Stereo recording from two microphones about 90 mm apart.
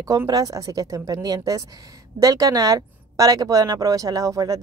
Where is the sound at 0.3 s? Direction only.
45° right (ahead or behind).